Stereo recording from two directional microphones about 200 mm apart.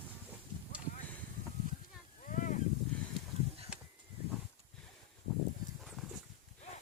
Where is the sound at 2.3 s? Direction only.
40° left (ahead or behind).